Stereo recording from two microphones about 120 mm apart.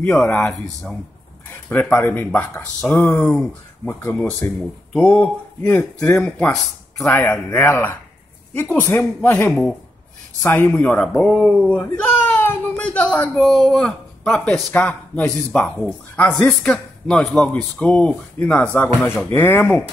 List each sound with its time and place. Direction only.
0.0 s speech: 15° left (ahead or behind)
13.4 s speech: centre (ahead or behind); by 19.8 s 15° left (ahead or behind)